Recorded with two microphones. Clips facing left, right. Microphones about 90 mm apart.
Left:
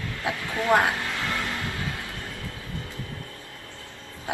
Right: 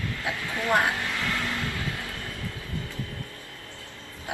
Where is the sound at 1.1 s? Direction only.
20° left (ahead or behind).